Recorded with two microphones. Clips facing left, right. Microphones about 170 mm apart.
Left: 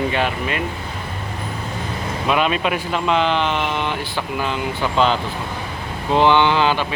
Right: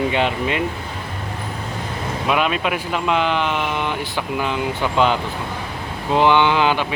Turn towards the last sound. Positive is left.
turn(degrees=-15)  # may be behind; listen again after turning